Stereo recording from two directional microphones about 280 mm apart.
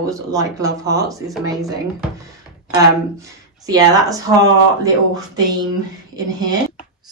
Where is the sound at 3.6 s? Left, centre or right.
Centre.